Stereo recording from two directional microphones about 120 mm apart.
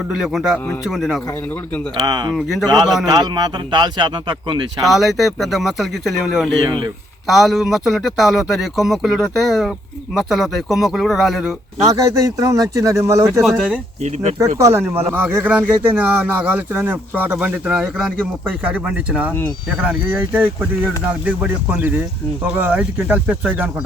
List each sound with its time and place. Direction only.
0.1 s speech: centre (ahead or behind)
2.0 s a man's voice: 35° right (ahead or behind)
2.3 s speech: centre (ahead or behind)
3.1 s a man's voice: 35° right (ahead or behind)
4.8 s speech: centre (ahead or behind)
6.7 s a man's voice: 40° right (ahead or behind)
7.3 s speech: centre (ahead or behind)
11.9 s speech: 30° right (ahead or behind)
13.4 s speech: centre (ahead or behind)
14.0 s speech: 70° right (ahead or behind)
14.6 s a man's voice: 20° right (ahead or behind)